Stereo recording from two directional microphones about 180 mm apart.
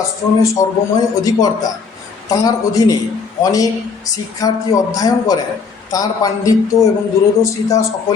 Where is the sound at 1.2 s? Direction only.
20° left (ahead or behind).